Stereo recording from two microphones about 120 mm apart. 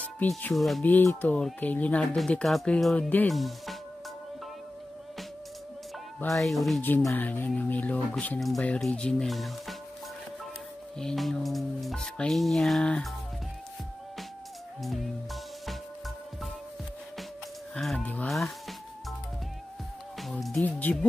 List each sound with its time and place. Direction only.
0.6 s music: centre (ahead or behind)
0.8 s speech: 15° left (ahead or behind)
2.1 s music: 5° left (ahead or behind)
6.3 s music: centre (ahead or behind)
7.0 s speech: 20° left (ahead or behind)
8.5 s music: 5° left (ahead or behind)
11.0 s music: 5° left (ahead or behind)
17.7 s speech: 5° left (ahead or behind)
20.2 s speech: centre (ahead or behind)